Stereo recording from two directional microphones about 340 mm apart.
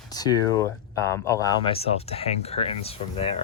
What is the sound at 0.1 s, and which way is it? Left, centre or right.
Speech, centre.